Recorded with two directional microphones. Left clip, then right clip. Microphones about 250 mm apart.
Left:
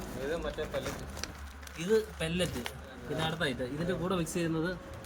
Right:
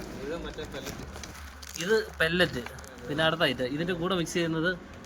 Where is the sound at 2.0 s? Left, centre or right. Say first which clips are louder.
Right 7 dB; centre.